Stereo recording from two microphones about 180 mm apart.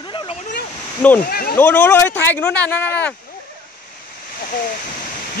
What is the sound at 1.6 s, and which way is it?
Speech, 10° left (ahead or behind).